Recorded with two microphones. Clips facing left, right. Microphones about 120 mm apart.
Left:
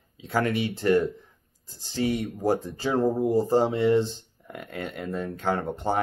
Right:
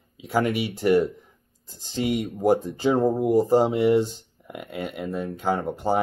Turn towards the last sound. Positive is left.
turn(degrees=-5)  # may be behind; listen again after turning